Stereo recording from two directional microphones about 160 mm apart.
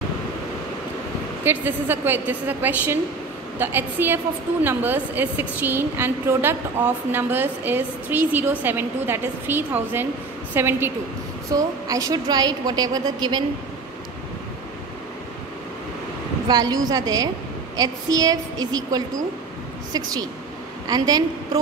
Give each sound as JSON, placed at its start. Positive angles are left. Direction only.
{"t": 1.4, "sound": "a woman's voice", "side_deg": -15}
{"t": 16.4, "sound": "a woman's voice", "side_deg": -25}